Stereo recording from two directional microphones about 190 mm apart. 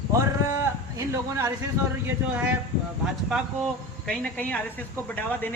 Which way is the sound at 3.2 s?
Centre (ahead or behind).